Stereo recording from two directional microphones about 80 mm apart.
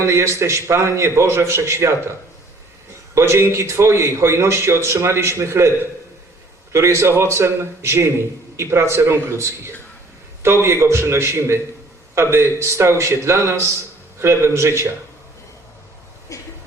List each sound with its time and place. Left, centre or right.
0.0 s speech: right
3.2 s speech: right
16.3 s a sound: left